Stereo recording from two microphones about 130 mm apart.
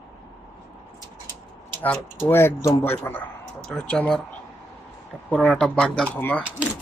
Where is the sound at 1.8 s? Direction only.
15° left (ahead or behind).